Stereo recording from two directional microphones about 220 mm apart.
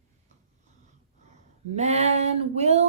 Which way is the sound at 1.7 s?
30° right (ahead or behind).